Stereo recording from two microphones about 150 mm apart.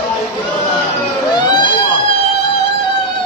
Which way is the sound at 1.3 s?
30° left (ahead or behind).